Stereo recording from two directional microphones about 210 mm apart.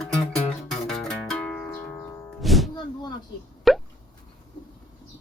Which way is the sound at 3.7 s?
Centre (ahead or behind).